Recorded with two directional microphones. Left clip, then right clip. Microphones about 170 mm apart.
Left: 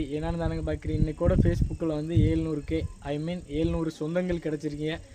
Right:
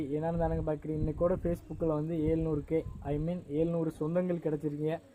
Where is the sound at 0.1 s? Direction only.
20° right (ahead or behind).